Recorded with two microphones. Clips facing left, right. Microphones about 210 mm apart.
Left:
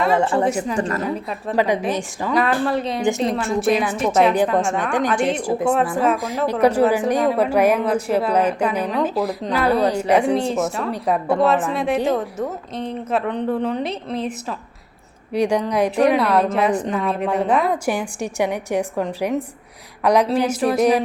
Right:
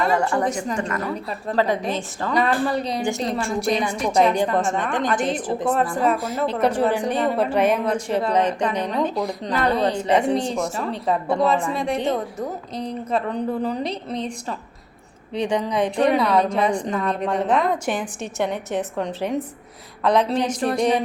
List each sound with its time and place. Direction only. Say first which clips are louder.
0.4 s a woman's voice: left 3 dB; 5° left (ahead or behind)
0.8 s a woman's voice: left 4 dB; 35° left (ahead or behind)
1.5 s a woman's voice: left 2 dB; 15° left (ahead or behind)
2.3 s a woman's voice: left 2 dB; centre (ahead or behind)